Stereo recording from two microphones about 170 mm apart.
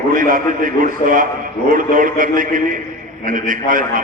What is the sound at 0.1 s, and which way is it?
A man's voice, 55° right (ahead or behind).